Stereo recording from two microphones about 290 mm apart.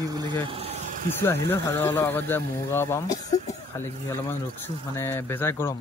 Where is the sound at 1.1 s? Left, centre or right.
Centre.